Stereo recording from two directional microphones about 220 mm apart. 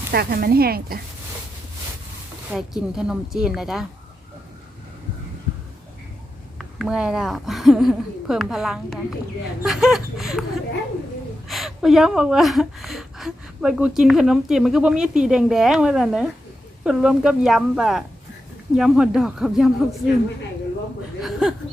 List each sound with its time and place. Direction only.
0.1 s speech: 45° right (ahead or behind)
2.5 s a woman's voice: centre (ahead or behind)
6.6 s a woman's voice: centre (ahead or behind)
21.2 s a woman's voice: centre (ahead or behind)